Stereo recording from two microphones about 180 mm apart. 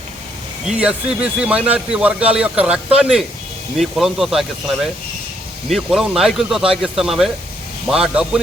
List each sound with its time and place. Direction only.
0.6 s speech: 5° right (ahead or behind)
5.6 s speech: centre (ahead or behind)